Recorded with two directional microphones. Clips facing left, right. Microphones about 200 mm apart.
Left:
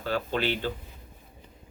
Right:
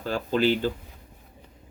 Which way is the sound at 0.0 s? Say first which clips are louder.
Right 4 dB; 40° right (ahead or behind).